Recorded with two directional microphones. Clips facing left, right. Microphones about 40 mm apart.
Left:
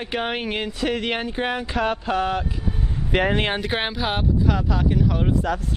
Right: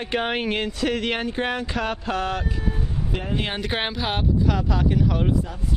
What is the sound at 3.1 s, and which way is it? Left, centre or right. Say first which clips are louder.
Speech: left 10 dB; left.